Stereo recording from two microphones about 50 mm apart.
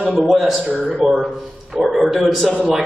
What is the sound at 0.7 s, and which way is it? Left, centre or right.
Speech, right.